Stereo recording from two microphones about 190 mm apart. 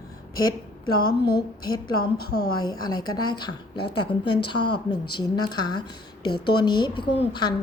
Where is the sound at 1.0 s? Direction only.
55° left (ahead or behind).